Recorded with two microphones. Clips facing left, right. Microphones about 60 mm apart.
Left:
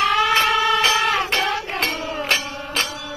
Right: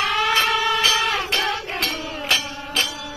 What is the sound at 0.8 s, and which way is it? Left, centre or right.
Music, left.